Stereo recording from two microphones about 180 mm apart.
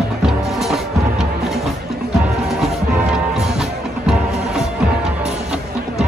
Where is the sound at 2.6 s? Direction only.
5° right (ahead or behind).